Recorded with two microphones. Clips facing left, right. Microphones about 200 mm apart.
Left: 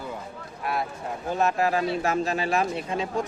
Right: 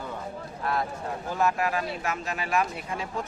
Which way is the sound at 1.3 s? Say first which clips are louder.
Left 3 dB; 25° left (ahead or behind).